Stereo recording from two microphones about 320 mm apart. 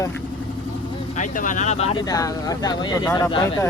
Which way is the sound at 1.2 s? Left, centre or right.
Left.